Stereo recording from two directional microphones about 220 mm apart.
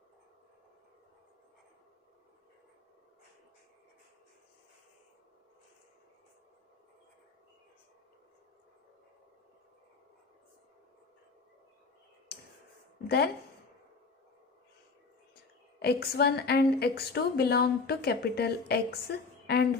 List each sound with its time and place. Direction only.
13.1 s speech: 45° left (ahead or behind)
15.8 s a woman's voice: 45° left (ahead or behind)